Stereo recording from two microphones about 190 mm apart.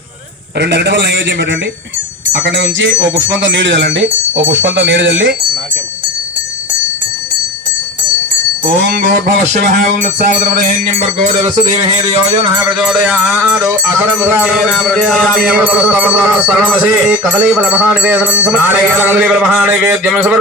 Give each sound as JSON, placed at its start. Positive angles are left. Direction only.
{"t": 0.6, "sound": "speech", "side_deg": -65}
{"t": 8.6, "sound": "music", "side_deg": -50}
{"t": 12.0, "sound": "music", "side_deg": -30}
{"t": 12.8, "sound": "speech", "side_deg": -5}